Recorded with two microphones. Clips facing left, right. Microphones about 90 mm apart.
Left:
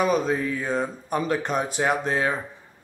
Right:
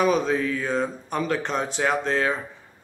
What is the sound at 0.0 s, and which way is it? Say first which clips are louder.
Speech: right 1 dB; 5° left (ahead or behind).